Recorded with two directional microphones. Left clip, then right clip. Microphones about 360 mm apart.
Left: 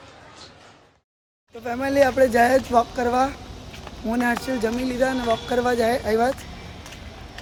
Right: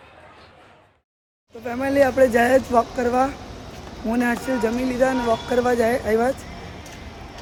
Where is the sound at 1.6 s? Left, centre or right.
Centre.